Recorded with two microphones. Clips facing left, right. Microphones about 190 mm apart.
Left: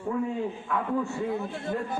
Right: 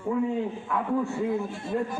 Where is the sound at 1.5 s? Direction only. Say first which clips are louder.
Right 2 dB; 60° left (ahead or behind).